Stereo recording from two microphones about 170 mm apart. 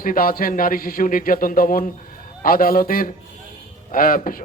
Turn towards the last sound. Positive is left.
turn(degrees=55)  # may be behind; listen again after turning